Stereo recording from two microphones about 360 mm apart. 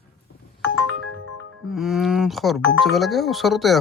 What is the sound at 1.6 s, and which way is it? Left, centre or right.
Speech, centre.